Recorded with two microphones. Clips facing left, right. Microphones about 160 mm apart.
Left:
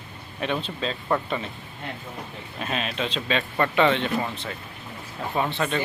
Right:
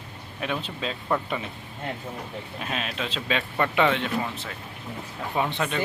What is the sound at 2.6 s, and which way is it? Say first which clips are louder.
A man's voice: left 4 dB; 5° right (ahead or behind).